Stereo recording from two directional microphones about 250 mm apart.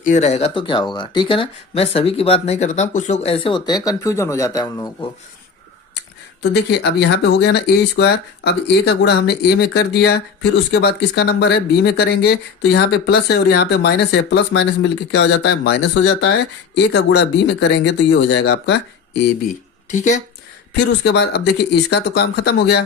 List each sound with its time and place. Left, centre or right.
0.0 s speech: left
6.4 s speech: left
19.9 s speech: left
20.7 s speech: left